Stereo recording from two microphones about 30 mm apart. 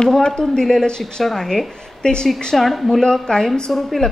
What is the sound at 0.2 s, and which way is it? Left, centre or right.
A woman's voice, left.